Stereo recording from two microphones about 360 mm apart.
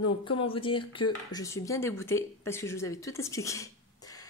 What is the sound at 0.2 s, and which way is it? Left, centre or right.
Speech, centre.